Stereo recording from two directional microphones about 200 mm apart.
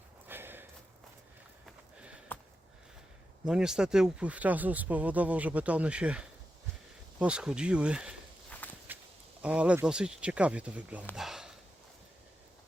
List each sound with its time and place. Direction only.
0.3 s a sound: 10° right (ahead or behind)
1.6 s sniff: 5° right (ahead or behind)
3.4 s speech: 5° right (ahead or behind)
8.4 s walk: 10° left (ahead or behind)
9.4 s speech: 5° right (ahead or behind)
11.1 s a sound: centre (ahead or behind)